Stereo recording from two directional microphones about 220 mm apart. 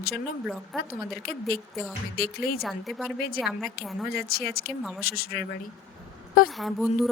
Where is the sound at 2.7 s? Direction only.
Centre (ahead or behind).